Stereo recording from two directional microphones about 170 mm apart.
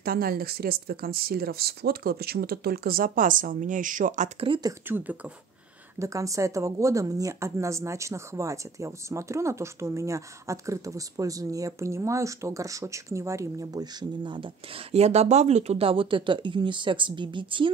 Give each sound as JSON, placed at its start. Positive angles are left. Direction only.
{"t": 0.0, "sound": "speech", "side_deg": -60}
{"t": 4.8, "sound": "speech", "side_deg": -10}